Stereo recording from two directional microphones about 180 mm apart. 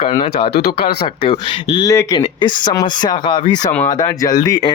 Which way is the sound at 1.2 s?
30° left (ahead or behind).